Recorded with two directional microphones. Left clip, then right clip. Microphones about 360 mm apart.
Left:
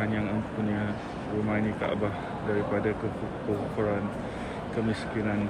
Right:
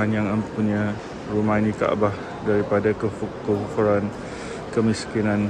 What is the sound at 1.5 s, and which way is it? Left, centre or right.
Speech, centre.